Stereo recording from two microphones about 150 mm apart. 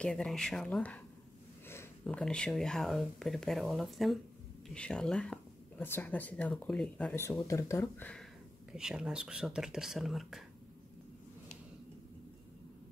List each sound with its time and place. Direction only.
0.0 s speech: 5° left (ahead or behind)
7.2 s speech: 20° left (ahead or behind)
8.7 s speech: 5° right (ahead or behind)